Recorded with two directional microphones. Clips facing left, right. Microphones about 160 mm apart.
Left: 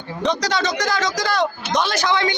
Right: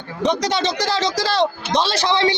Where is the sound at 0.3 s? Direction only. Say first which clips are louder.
Right 1 dB; 25° right (ahead or behind).